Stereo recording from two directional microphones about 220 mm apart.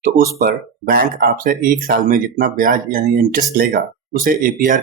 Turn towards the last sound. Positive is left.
turn(degrees=-40)  # may be behind; listen again after turning